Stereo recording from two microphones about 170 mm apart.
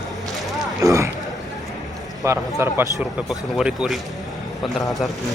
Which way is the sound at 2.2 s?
15° right (ahead or behind).